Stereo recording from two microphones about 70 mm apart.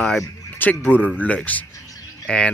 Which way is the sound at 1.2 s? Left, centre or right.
Left.